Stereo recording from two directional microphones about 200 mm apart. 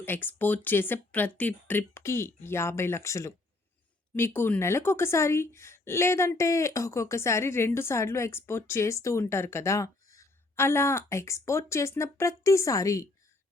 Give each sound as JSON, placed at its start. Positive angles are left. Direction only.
{"t": 0.0, "sound": "a woman's voice", "side_deg": 10}